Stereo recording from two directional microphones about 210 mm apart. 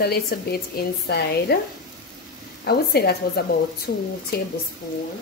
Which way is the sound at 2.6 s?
50° left (ahead or behind).